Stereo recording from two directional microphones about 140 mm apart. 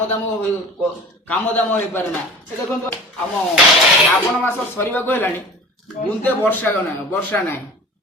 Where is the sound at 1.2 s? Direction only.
10° left (ahead or behind).